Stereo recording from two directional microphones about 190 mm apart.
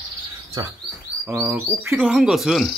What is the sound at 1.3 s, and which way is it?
Speech, 10° right (ahead or behind).